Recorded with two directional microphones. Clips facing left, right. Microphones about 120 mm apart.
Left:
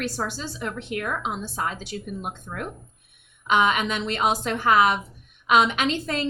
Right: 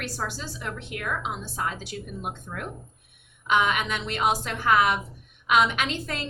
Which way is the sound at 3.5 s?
25° left (ahead or behind).